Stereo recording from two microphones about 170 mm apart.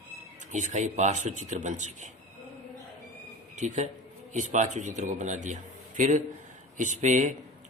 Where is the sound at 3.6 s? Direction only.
45° right (ahead or behind).